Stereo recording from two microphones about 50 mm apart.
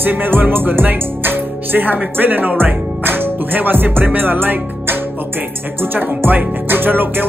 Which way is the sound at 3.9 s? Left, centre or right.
Right.